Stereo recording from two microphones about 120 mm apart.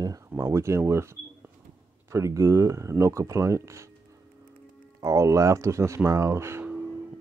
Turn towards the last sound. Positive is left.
turn(degrees=-20)  # may be behind; listen again after turning